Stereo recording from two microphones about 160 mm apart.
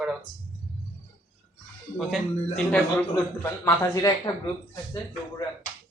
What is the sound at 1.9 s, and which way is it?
Speech, 5° left (ahead or behind).